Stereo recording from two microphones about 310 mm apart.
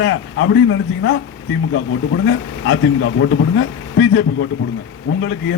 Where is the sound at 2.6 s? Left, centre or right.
Left.